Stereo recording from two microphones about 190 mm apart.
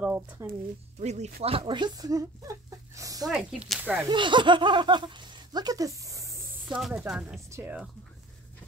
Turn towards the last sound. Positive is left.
turn(degrees=-10)  # may be behind; listen again after turning